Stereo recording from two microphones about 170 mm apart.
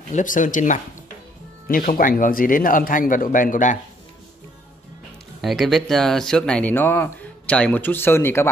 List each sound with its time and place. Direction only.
0.1 s speech: 50° left (ahead or behind)
5.4 s speech: centre (ahead or behind)